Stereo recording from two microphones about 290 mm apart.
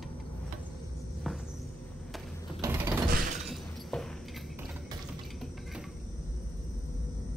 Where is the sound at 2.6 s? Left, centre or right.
Centre.